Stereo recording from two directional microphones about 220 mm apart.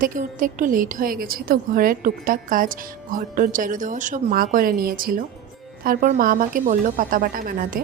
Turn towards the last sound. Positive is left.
turn(degrees=-40)  # may be behind; listen again after turning